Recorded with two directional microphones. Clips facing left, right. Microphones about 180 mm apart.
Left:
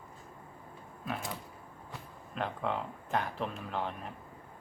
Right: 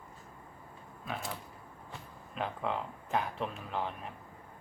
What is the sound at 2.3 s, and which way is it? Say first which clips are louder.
Speech: left 1 dB; centre (ahead or behind).